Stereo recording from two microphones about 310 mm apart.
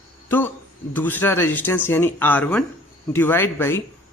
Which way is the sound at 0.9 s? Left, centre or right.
Centre.